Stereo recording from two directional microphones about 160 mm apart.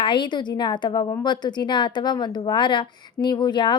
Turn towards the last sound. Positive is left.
turn(degrees=30)  # may be behind; listen again after turning